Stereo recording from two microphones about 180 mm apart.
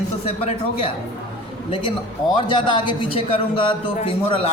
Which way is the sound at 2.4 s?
25° left (ahead or behind).